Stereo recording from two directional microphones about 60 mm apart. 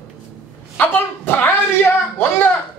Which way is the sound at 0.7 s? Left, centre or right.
Left.